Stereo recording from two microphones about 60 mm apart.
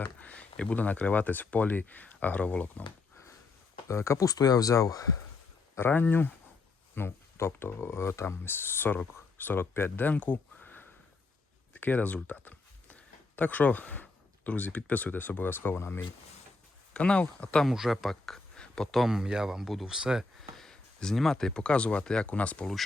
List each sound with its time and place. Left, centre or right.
0.0 s speech: left
3.8 s speech: left
4.3 s speech: left
5.7 s speech: left
10.1 s a sound: left
11.7 s speech: left
16.9 s speech: centre
17.7 s speech: centre
18.6 s a sound: centre
18.9 s speech: centre
20.6 s speech: centre